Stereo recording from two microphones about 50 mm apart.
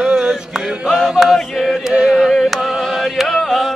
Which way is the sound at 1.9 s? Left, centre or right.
Centre.